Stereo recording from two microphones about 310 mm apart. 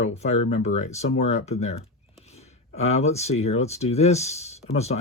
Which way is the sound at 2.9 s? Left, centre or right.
Left.